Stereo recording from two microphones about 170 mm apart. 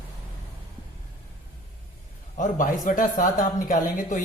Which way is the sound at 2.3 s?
50° left (ahead or behind).